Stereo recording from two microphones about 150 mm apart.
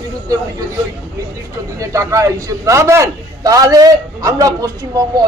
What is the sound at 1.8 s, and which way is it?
Speech, 20° right (ahead or behind).